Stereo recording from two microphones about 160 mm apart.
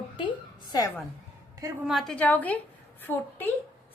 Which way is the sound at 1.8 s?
Centre (ahead or behind).